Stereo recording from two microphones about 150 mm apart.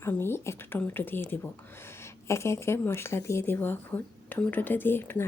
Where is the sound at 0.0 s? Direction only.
15° left (ahead or behind).